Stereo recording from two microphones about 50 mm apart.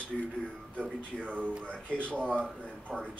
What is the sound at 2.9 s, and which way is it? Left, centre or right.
Speech, centre.